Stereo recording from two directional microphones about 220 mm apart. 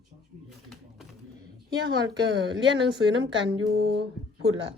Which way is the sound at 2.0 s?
55° right (ahead or behind).